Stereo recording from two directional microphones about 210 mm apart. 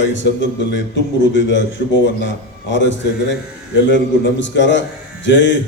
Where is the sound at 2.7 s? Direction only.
60° left (ahead or behind).